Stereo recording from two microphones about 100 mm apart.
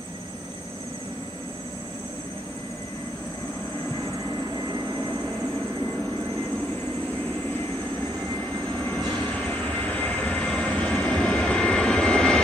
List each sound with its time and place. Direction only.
8.7 s vehicle: 15° left (ahead or behind)